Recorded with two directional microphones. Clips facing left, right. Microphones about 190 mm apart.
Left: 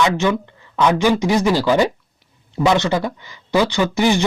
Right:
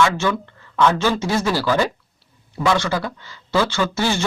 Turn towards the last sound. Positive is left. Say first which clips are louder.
# left 4 dB
turn(degrees=15)  # may be behind; listen again after turning